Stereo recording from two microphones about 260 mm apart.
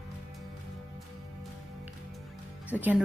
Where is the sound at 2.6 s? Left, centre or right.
Centre.